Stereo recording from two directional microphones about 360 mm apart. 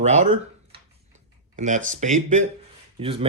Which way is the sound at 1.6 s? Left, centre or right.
Centre.